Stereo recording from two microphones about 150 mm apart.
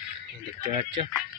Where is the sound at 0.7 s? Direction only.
35° right (ahead or behind).